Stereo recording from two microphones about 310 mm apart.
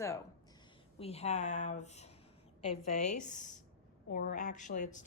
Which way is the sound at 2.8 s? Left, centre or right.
Left.